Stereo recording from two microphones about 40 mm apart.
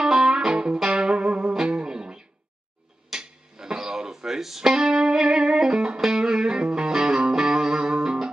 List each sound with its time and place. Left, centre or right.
0.0 s music: centre